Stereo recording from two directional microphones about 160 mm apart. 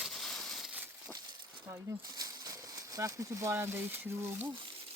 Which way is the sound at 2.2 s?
25° right (ahead or behind).